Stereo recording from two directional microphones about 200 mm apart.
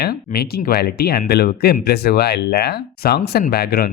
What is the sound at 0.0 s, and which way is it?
Speech, 50° left (ahead or behind).